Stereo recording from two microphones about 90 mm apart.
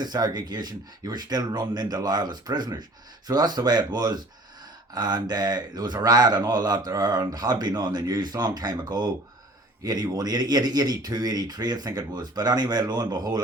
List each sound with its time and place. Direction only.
0.0 s speech: 50° right (ahead or behind)